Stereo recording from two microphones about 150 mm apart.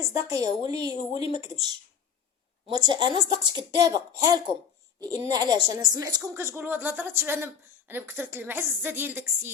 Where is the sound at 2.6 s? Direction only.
30° right (ahead or behind).